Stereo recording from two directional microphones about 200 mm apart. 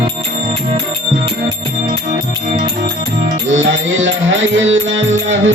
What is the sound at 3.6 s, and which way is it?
Music, 70° right (ahead or behind).